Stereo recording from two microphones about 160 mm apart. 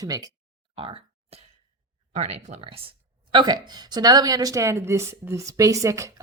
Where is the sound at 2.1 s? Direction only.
45° right (ahead or behind).